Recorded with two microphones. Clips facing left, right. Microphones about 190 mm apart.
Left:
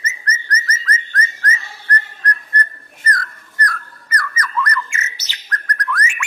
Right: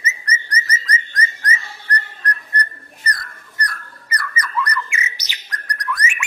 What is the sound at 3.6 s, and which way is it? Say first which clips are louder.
Bird: left 4 dB; 15° right (ahead or behind).